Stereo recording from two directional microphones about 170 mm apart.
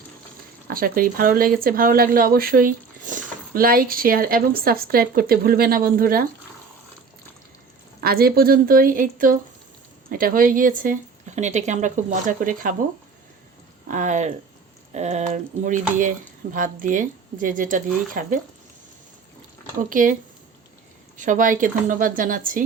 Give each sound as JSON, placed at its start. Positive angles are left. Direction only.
{"t": 0.7, "sound": "speech", "side_deg": -60}
{"t": 8.0, "sound": "a woman's voice", "side_deg": -65}
{"t": 13.8, "sound": "a woman's voice", "side_deg": -45}
{"t": 19.9, "sound": "a woman's voice", "side_deg": -50}
{"t": 21.2, "sound": "a woman's voice", "side_deg": -50}